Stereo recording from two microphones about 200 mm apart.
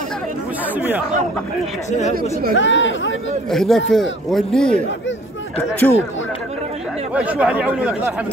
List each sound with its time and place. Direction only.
0.7 s speech: 10° right (ahead or behind)
1.9 s speech: 35° left (ahead or behind)
2.5 s speech: 70° left (ahead or behind)
3.4 s a man's voice: centre (ahead or behind)
7.2 s speech: 5° right (ahead or behind)